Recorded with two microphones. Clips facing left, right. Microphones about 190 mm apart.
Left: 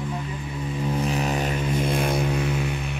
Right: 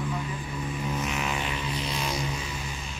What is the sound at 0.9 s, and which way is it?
Didgeridoo, 35° left (ahead or behind).